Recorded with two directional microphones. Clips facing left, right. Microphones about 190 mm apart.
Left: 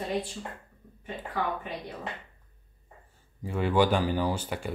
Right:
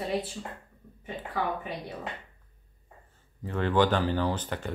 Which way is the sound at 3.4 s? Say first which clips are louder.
Even; 10° left (ahead or behind).